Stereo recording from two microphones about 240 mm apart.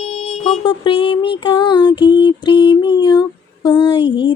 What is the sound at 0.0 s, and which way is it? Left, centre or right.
Music, left.